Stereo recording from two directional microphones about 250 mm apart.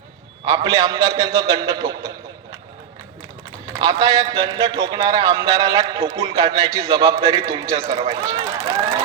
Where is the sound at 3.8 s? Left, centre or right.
Centre.